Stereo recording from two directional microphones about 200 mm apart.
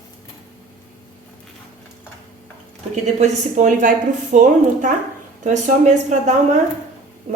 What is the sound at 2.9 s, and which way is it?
A woman's voice, 35° right (ahead or behind).